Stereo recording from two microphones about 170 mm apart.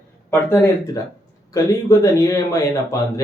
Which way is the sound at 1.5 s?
20° left (ahead or behind).